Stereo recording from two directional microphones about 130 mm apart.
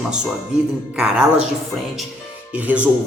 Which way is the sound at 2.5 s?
10° right (ahead or behind).